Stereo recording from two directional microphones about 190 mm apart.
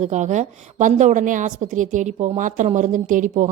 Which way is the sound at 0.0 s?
40° right (ahead or behind).